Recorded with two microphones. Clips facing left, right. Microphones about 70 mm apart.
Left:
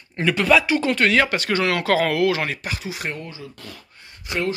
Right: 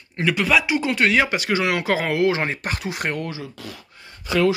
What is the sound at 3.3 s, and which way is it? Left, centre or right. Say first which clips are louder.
Speech: right 4 dB; right.